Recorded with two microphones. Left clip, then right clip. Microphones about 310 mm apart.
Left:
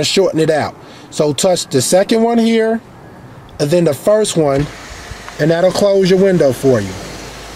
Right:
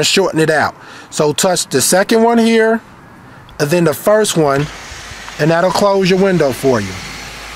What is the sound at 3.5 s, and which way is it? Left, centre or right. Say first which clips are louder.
Speech: even; right.